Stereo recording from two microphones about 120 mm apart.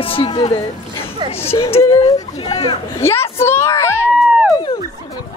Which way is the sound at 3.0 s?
20° left (ahead or behind).